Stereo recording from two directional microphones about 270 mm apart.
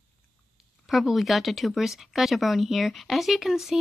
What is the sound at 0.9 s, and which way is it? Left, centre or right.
Speech, centre.